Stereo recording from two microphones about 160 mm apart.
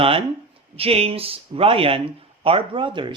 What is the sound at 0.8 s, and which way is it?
Speech, 40° right (ahead or behind).